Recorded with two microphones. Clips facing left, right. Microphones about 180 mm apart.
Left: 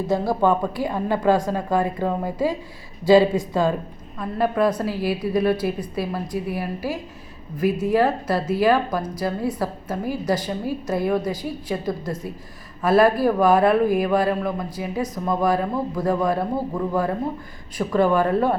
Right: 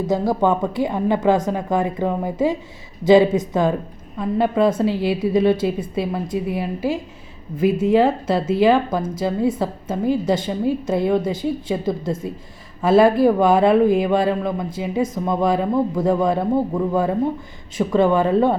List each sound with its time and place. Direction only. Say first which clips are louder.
0.1 s speech: right 1 dB; 20° right (ahead or behind)
17.7 s speech: right 2 dB; 25° right (ahead or behind)